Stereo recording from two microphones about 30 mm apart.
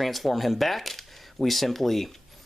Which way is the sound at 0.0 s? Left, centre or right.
Centre.